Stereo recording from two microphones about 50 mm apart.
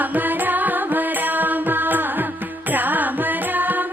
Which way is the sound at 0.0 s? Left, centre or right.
Right.